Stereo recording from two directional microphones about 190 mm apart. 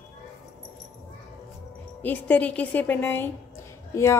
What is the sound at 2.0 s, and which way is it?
A woman's voice, 10° left (ahead or behind).